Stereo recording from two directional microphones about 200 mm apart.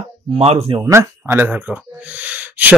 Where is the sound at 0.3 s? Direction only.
30° right (ahead or behind).